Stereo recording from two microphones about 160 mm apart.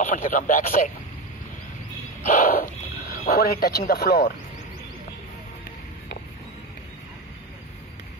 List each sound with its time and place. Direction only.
0.0 s speech: 60° left (ahead or behind)
2.2 s speech: 60° left (ahead or behind); by 3.8 s 75° left (ahead or behind)
3.9 s speech: 90° left